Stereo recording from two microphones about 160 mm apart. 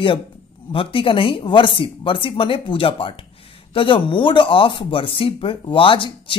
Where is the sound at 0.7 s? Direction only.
35° left (ahead or behind).